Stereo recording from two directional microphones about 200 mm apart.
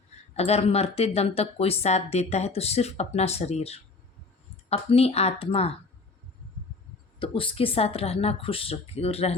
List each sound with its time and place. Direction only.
0.3 s speech: 30° left (ahead or behind)
7.2 s speech: 25° left (ahead or behind)